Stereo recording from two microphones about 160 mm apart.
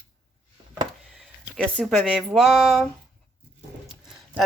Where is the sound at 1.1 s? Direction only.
Centre (ahead or behind).